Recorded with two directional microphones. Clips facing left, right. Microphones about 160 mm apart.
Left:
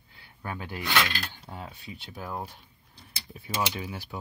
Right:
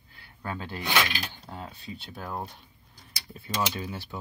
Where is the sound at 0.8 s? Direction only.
20° right (ahead or behind).